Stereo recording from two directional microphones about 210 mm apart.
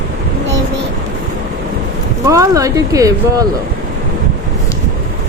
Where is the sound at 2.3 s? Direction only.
15° right (ahead or behind).